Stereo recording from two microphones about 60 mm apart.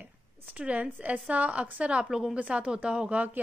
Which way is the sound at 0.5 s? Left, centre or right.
Right.